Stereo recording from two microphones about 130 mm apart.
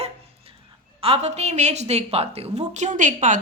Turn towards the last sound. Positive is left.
turn(degrees=-75)  # may be behind; listen again after turning